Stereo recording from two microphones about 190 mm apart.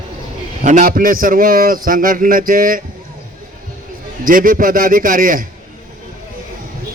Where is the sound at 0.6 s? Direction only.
45° right (ahead or behind).